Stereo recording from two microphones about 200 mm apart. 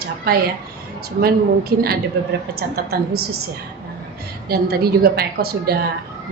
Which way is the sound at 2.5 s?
50° right (ahead or behind).